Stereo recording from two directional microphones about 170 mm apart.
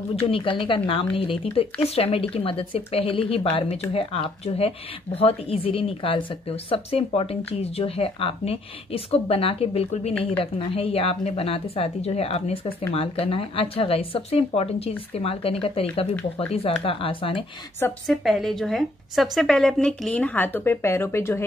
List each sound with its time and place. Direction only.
0.1 s speech: 35° left (ahead or behind)
18.0 s a woman's voice: centre (ahead or behind)